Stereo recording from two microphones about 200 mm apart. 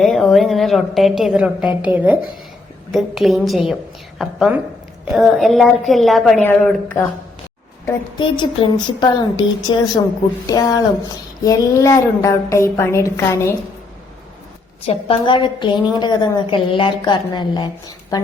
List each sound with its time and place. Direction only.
0.0 s a woman's voice: centre (ahead or behind)
7.9 s a woman's voice: 20° left (ahead or behind)
14.8 s a woman's voice: 25° left (ahead or behind)